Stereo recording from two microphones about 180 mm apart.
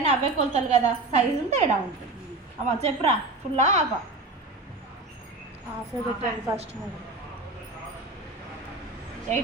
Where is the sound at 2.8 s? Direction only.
35° right (ahead or behind).